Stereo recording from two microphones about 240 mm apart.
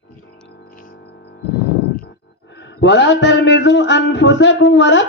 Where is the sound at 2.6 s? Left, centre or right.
Left.